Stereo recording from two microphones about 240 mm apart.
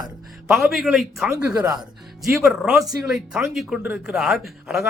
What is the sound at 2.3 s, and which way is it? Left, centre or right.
Speech, centre.